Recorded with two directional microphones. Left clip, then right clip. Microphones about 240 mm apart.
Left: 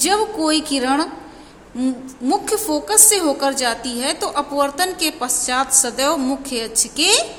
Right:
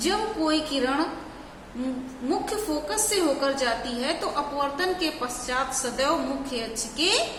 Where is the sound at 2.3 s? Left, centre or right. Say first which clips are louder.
Left 8 dB; left.